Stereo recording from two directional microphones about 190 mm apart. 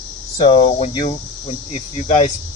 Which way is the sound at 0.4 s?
25° left (ahead or behind).